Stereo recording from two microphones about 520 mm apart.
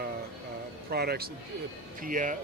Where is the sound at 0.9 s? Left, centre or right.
Centre.